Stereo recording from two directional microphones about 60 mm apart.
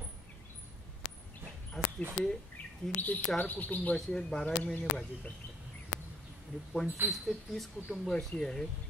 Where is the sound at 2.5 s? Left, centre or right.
Left.